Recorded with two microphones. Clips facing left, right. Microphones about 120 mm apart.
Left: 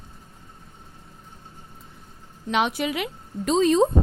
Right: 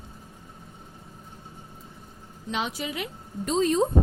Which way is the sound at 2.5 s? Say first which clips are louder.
Left 7 dB; 70° left (ahead or behind).